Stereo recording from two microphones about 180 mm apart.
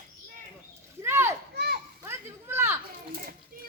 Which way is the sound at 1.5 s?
60° right (ahead or behind).